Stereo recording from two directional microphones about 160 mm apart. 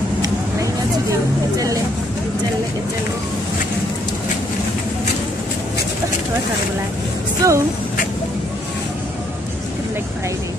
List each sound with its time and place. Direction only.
7.4 s speech: 20° right (ahead or behind)